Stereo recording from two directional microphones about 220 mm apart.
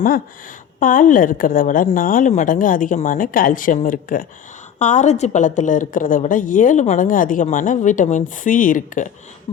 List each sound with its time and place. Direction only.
0.8 s a woman's voice: 35° left (ahead or behind)